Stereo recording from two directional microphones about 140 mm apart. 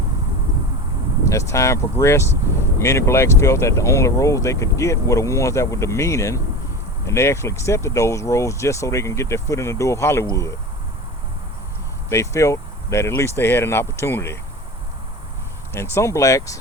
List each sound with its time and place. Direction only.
1.3 s speech: 20° left (ahead or behind)
12.0 s speech: 20° left (ahead or behind)
15.7 s speech: 20° left (ahead or behind)